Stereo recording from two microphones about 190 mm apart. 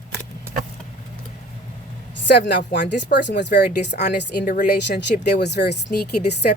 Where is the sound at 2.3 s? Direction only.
65° left (ahead or behind).